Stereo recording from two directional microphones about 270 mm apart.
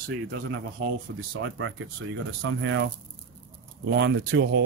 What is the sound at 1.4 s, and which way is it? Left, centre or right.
A man's voice, right.